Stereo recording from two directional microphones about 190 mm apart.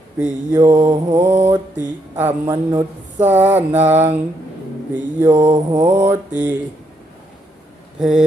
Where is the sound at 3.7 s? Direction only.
35° right (ahead or behind).